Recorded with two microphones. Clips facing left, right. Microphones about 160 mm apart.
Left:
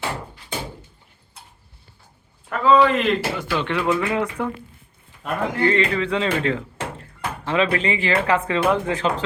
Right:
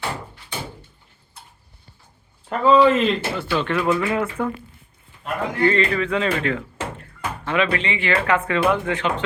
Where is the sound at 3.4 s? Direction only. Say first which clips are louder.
Right 1 dB; 15° left (ahead or behind).